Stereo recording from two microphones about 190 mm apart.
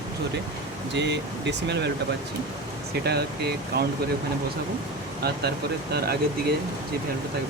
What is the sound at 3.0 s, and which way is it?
Speech, 60° right (ahead or behind).